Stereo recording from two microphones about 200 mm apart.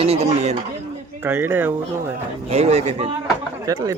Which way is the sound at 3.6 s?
15° right (ahead or behind).